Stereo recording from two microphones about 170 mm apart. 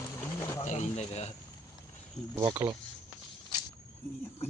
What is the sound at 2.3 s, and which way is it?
Speech, 15° right (ahead or behind).